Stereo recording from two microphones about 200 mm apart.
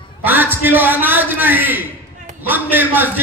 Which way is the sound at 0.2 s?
10° right (ahead or behind).